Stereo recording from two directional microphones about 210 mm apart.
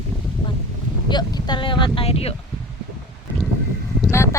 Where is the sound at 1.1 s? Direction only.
20° left (ahead or behind).